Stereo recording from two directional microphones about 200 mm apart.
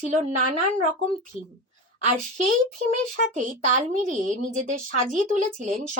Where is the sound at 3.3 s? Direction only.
40° right (ahead or behind).